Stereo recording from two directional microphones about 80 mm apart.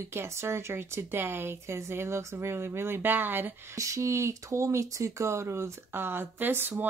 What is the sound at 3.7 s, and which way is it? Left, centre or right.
Speech, right.